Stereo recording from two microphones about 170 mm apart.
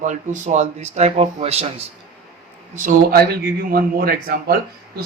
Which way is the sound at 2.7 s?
55° right (ahead or behind).